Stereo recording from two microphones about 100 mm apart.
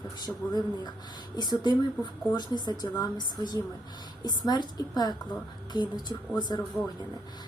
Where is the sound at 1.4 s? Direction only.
45° left (ahead or behind).